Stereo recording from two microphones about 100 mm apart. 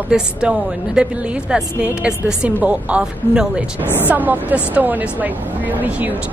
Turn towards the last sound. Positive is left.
turn(degrees=-15)  # may be behind; listen again after turning